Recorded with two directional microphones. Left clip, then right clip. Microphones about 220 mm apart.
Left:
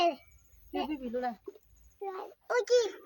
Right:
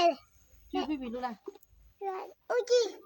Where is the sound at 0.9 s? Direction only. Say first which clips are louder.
Left 1 dB; 45° right (ahead or behind).